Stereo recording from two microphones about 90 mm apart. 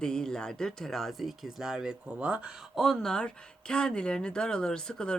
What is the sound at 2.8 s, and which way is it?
Speech, 5° left (ahead or behind).